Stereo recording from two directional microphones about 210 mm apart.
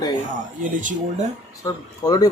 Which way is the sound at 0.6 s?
40° right (ahead or behind).